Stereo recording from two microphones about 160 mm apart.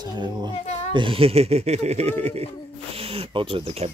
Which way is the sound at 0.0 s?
25° right (ahead or behind).